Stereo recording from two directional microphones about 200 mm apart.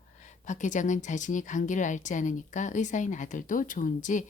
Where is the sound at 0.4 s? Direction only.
40° left (ahead or behind).